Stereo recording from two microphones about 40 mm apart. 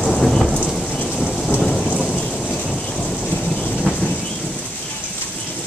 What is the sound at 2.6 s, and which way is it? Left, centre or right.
Thunder, centre.